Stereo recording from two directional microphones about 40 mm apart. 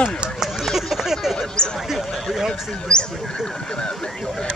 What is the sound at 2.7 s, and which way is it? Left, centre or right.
Speech, left.